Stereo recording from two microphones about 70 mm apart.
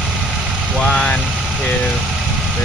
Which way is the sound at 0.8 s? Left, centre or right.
Centre.